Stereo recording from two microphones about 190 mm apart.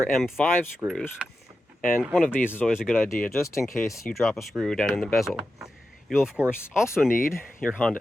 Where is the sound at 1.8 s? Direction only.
45° left (ahead or behind).